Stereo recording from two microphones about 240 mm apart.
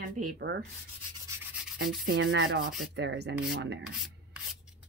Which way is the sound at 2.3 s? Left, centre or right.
Right.